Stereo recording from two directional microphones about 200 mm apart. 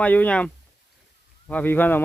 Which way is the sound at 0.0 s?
5° left (ahead or behind).